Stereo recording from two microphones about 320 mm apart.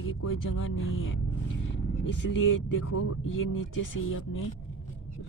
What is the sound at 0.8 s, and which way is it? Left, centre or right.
Speech, left.